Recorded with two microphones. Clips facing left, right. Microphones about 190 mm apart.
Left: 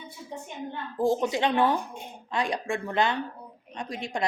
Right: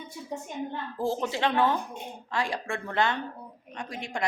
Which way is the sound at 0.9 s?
15° left (ahead or behind).